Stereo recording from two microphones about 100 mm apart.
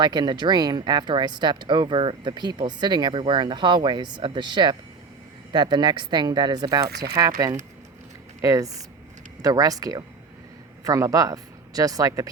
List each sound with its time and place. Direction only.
0.0 s speech: 45° right (ahead or behind)